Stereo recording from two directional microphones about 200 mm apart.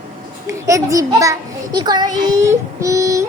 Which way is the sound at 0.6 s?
15° right (ahead or behind).